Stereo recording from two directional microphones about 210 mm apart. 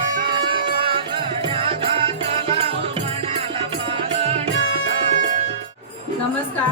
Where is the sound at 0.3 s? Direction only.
25° right (ahead or behind).